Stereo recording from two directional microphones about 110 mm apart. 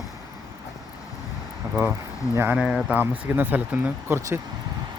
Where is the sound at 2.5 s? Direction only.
10° right (ahead or behind).